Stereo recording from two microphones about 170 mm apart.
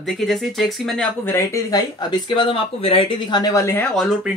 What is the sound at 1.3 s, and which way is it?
Speech, 15° left (ahead or behind).